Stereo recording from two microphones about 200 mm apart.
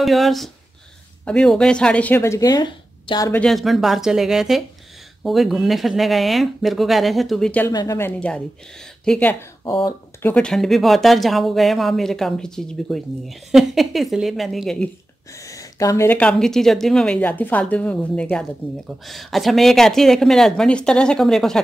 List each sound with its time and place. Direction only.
0.0 s speech: centre (ahead or behind); by 3.3 s 20° left (ahead or behind)
3.3 s speech: centre (ahead or behind)
7.7 s speech: 15° left (ahead or behind)
8.2 s speech: 5° left (ahead or behind)
9.7 s speech: 25° left (ahead or behind)
10.2 s speech: 5° left (ahead or behind)
15.3 s speech: 15° left (ahead or behind)